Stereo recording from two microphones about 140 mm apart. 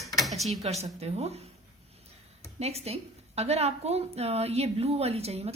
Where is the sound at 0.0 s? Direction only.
Centre (ahead or behind).